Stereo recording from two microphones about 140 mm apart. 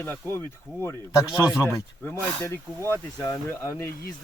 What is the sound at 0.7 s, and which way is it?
Speech, 25° right (ahead or behind).